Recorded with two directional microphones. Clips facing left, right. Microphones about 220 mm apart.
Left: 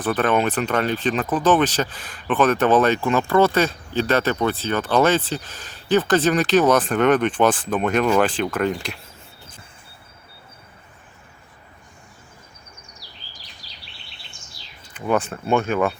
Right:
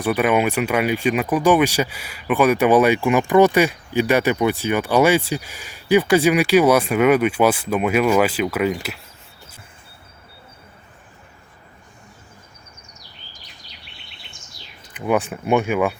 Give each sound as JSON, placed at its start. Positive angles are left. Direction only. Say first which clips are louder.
{"t": 0.0, "sound": "speech", "louder": "right 2 dB", "side_deg": -10}
{"t": 13.0, "sound": "bird vocalization", "louder": "even", "side_deg": 35}
{"t": 14.9, "sound": "speech", "louder": "right 1 dB", "side_deg": -15}